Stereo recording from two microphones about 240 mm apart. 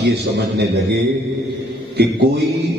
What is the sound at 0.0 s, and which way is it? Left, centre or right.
Speech, right.